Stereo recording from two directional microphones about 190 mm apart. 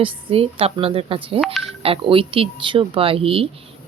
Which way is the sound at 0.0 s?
30° right (ahead or behind).